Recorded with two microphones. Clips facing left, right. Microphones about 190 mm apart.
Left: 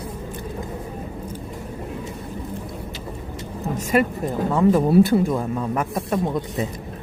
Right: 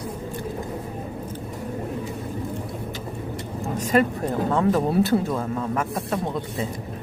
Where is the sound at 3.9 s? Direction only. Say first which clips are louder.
Even; 10° left (ahead or behind).